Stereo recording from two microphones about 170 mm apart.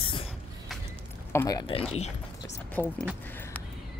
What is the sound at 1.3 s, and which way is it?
Speech, 20° left (ahead or behind).